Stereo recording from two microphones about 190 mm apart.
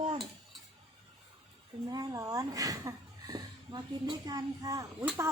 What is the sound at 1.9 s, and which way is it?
A child's voice, 20° right (ahead or behind).